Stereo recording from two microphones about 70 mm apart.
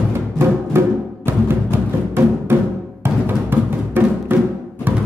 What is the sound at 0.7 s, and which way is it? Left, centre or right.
Music, right.